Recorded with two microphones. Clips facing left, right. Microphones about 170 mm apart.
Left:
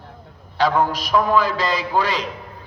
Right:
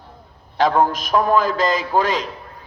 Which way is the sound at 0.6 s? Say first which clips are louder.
Right 2 dB; 50° right (ahead or behind).